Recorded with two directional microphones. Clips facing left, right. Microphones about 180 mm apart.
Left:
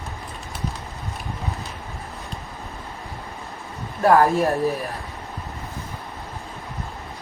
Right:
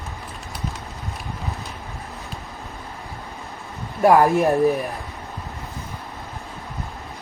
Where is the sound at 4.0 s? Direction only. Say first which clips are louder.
Right 2 dB; 15° right (ahead or behind).